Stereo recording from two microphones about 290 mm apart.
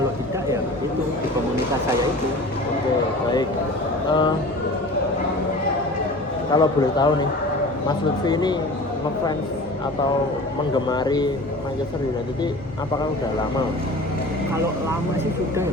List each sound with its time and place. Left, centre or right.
4.1 s a man's voice: centre
6.5 s a man's voice: centre
10.8 s a man's voice: centre